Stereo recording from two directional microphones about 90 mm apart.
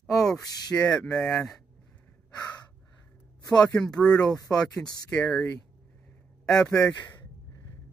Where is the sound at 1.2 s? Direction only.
25° left (ahead or behind).